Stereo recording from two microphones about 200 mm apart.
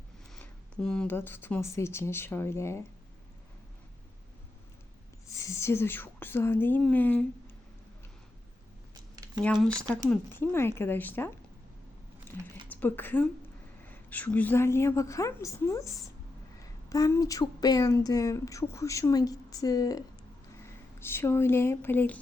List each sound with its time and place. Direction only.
0.3 s a woman's voice: 5° left (ahead or behind)
5.4 s a woman's voice: 15° left (ahead or behind)
9.1 s a sound: 20° right (ahead or behind)
9.4 s a woman's voice: centre (ahead or behind)
12.6 s a woman's voice: 10° left (ahead or behind)